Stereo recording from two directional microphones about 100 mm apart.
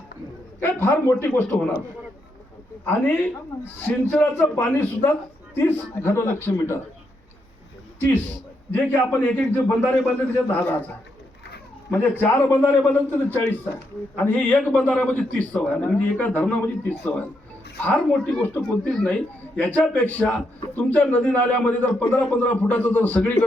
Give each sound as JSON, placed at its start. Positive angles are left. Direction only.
{"t": 0.6, "sound": "a man's voice", "side_deg": 20}
{"t": 2.8, "sound": "a man's voice", "side_deg": 15}
{"t": 8.7, "sound": "a man's voice", "side_deg": 15}
{"t": 11.9, "sound": "a man's voice", "side_deg": 20}
{"t": 17.8, "sound": "a man's voice", "side_deg": 15}
{"t": 18.9, "sound": "a man's voice", "side_deg": 5}